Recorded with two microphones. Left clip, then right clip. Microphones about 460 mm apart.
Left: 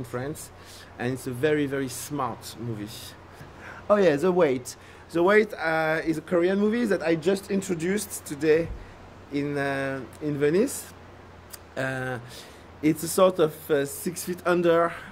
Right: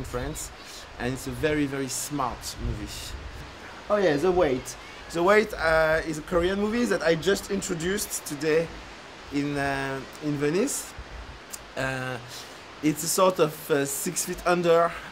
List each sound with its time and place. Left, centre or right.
0.1 s speech: left
3.9 s speech: left
5.1 s speech: left